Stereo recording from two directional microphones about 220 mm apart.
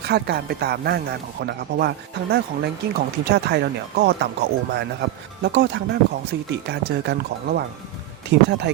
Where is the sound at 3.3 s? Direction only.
50° right (ahead or behind).